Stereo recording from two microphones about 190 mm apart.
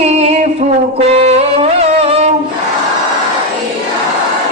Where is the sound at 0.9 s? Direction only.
35° right (ahead or behind).